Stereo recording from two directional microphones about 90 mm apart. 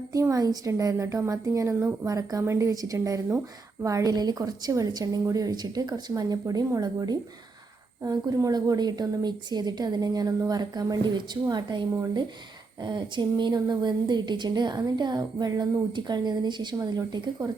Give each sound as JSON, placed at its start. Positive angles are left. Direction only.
{"t": 0.1, "sound": "a woman's voice", "side_deg": -40}